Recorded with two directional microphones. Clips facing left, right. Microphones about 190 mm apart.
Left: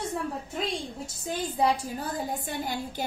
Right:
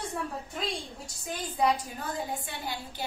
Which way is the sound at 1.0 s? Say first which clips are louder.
Left 5 dB; 25° left (ahead or behind).